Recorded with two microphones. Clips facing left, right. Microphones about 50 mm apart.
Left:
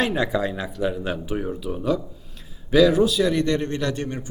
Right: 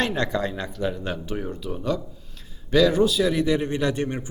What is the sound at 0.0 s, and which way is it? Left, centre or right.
A man's voice, centre.